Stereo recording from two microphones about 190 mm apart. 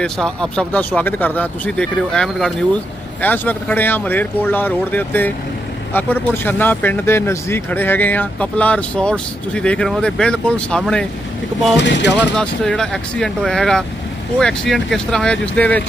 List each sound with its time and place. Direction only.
0.0 s speech: 5° left (ahead or behind)
11.8 s mechanisms: 70° left (ahead or behind)
12.4 s speech: 5° left (ahead or behind)